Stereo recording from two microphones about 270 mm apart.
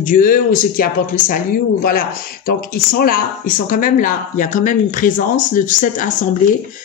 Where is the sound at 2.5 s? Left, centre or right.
Left.